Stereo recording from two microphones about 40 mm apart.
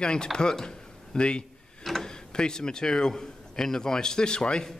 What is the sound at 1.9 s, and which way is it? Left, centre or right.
Tick-tock, centre.